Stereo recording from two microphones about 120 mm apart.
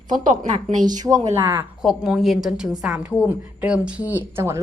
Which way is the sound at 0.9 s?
30° right (ahead or behind).